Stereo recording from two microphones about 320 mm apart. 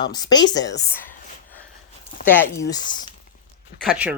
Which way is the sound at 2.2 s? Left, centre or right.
Centre.